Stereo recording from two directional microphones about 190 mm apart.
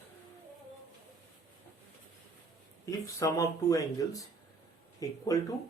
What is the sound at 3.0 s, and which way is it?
A man's voice, 15° left (ahead or behind).